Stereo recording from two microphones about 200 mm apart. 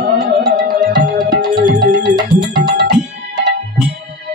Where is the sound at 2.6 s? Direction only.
55° right (ahead or behind).